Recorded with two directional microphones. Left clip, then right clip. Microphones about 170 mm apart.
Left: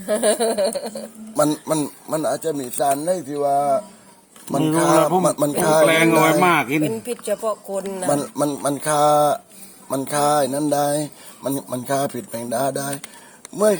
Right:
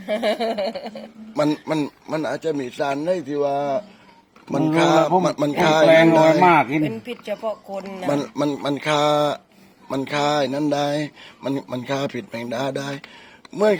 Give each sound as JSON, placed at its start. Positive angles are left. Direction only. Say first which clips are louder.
{"t": 0.1, "sound": "speech", "louder": "left 3 dB", "side_deg": 60}
{"t": 1.4, "sound": "speech", "louder": "left 2 dB", "side_deg": 0}
{"t": 3.4, "sound": "speech", "louder": "left 5 dB", "side_deg": -35}
{"t": 4.5, "sound": "speech", "louder": "even", "side_deg": 0}
{"t": 6.8, "sound": "speech", "louder": "left 3 dB", "side_deg": 60}
{"t": 8.0, "sound": "speech", "louder": "left 1 dB", "side_deg": 0}